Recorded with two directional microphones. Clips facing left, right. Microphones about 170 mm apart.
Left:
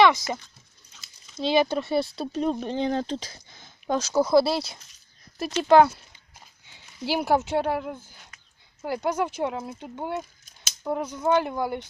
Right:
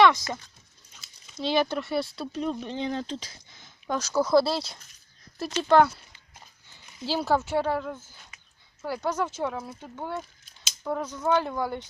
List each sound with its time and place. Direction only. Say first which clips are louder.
1.4 s speech: left 3 dB; 15° left (ahead or behind)
2.3 s speech: left 5 dB; 45° left (ahead or behind)
3.8 s speech: left 3 dB; 25° left (ahead or behind)